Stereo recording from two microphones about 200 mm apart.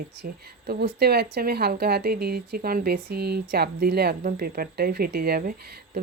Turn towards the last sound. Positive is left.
turn(degrees=-50)  # may be behind; listen again after turning